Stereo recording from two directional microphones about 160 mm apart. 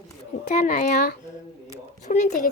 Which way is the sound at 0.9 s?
85° left.